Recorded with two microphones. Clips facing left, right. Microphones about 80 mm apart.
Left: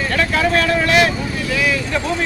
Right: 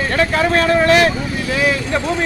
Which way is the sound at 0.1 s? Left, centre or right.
Right.